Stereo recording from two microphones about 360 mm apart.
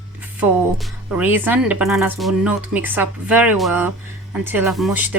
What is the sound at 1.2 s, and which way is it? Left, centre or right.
Speech, centre.